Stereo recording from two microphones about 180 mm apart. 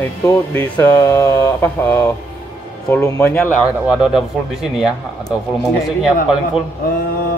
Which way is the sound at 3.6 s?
5° right (ahead or behind).